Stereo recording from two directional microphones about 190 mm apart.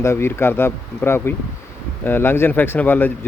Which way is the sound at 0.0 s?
15° left (ahead or behind).